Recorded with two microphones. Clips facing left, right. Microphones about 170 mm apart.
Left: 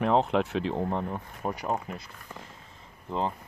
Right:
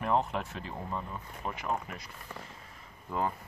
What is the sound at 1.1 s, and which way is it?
Speech, 40° left (ahead or behind).